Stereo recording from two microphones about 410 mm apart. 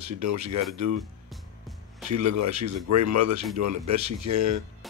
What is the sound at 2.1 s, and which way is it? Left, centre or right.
Speech, right.